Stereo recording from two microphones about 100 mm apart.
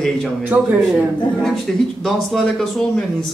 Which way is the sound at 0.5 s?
20° right (ahead or behind).